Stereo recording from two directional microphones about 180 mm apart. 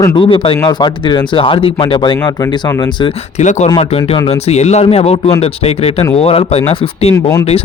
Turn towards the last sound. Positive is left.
turn(degrees=15)  # may be behind; listen again after turning